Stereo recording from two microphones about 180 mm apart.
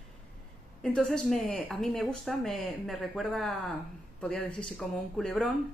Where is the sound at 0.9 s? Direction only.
5° left (ahead or behind).